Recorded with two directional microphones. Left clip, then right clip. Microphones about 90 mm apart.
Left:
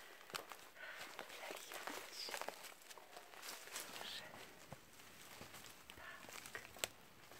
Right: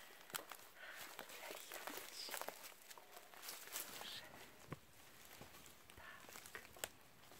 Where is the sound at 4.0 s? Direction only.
Centre (ahead or behind).